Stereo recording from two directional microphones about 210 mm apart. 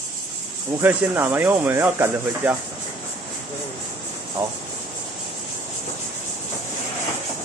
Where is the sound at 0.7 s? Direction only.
10° right (ahead or behind).